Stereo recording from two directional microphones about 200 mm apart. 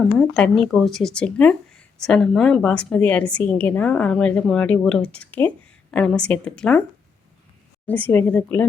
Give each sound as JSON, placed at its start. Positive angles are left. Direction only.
{"t": 0.2, "sound": "speech", "side_deg": 5}
{"t": 7.9, "sound": "speech", "side_deg": 5}